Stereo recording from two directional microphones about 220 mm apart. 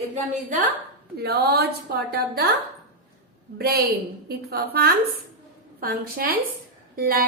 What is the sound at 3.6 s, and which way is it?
A woman's voice, 45° right (ahead or behind).